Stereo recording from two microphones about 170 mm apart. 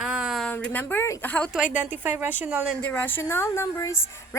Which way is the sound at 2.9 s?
10° left (ahead or behind).